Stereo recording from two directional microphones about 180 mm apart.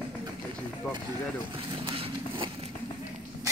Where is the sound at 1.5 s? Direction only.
30° right (ahead or behind).